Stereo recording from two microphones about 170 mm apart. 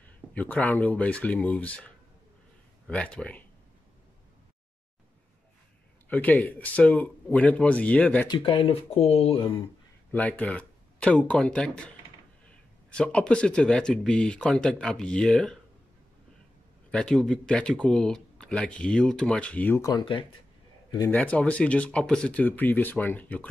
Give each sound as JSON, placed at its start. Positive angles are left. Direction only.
{"t": 0.3, "sound": "speech", "side_deg": 10}
{"t": 2.9, "sound": "speech", "side_deg": 5}
{"t": 6.0, "sound": "speech", "side_deg": 10}
{"t": 8.3, "sound": "speech", "side_deg": 30}
{"t": 10.1, "sound": "speech", "side_deg": 10}
{"t": 12.9, "sound": "speech", "side_deg": 5}
{"t": 16.9, "sound": "speech", "side_deg": 5}
{"t": 19.9, "sound": "speech", "side_deg": 30}
{"t": 21.1, "sound": "speech", "side_deg": 5}